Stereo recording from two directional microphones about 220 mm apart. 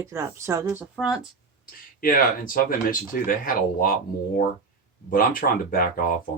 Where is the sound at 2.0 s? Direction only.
40° left (ahead or behind).